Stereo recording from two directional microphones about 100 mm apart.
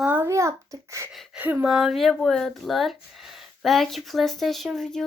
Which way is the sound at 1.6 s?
5° right (ahead or behind).